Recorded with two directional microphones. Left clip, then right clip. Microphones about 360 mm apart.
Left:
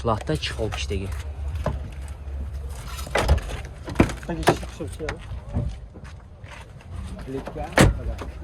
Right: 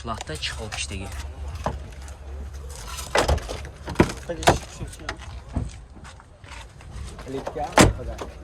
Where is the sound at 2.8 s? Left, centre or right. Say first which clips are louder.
Right 2 dB; right.